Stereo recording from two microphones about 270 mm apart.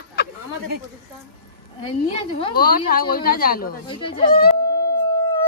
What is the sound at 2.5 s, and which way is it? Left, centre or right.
A woman's voice, left.